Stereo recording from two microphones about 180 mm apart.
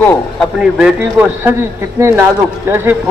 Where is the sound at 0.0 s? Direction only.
10° left (ahead or behind).